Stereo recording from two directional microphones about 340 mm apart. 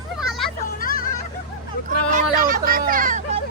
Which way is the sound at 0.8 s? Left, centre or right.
Left.